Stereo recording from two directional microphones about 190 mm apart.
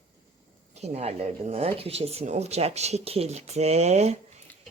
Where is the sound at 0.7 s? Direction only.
35° right (ahead or behind).